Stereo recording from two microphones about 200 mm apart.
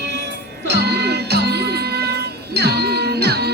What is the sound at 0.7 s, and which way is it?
Music, 55° right (ahead or behind).